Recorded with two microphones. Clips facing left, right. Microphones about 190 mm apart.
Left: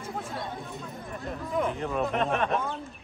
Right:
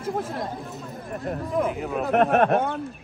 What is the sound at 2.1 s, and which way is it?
Speech, 60° right (ahead or behind).